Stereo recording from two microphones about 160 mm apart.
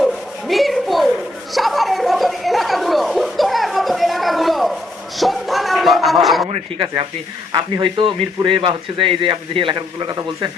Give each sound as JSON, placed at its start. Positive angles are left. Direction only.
{"t": 0.0, "sound": "rub", "side_deg": 0}
{"t": 1.5, "sound": "chatter", "side_deg": 0}
{"t": 6.5, "sound": "a man's voice", "side_deg": -30}